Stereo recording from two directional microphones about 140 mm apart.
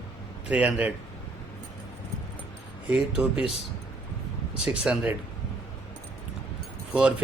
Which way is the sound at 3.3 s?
45° left (ahead or behind).